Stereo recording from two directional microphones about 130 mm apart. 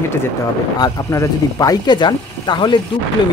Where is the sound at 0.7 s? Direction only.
30° left (ahead or behind).